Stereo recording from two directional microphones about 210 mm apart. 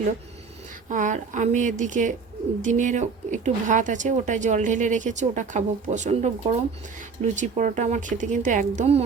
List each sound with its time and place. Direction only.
0.9 s speech: 35° right (ahead or behind)